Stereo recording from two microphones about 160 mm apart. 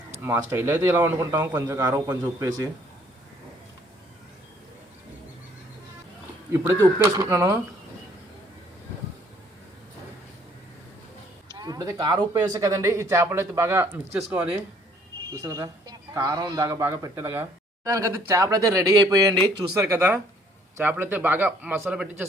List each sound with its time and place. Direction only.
0.1 s a man's voice: 15° right (ahead or behind)
6.5 s speech: 20° right (ahead or behind)
11.5 s a man's voice: 25° right (ahead or behind)
15.3 s a man's voice: 20° right (ahead or behind)